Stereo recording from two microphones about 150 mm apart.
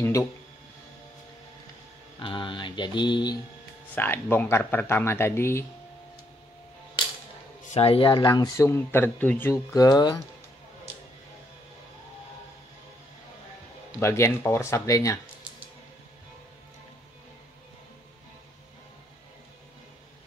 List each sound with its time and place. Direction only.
0.0 s speech: 20° left (ahead or behind)
2.1 s mantra: 35° left (ahead or behind)
3.9 s speech: 15° left (ahead or behind)
7.7 s speech: 40° left (ahead or behind)
14.0 s speech: 20° left (ahead or behind)